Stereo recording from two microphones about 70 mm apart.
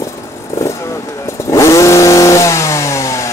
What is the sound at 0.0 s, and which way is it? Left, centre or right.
Vehicle, left.